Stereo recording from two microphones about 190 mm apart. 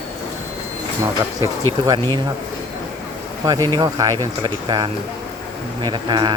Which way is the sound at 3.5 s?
20° right (ahead or behind).